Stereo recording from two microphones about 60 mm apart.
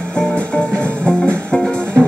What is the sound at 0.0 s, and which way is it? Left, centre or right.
Music, centre.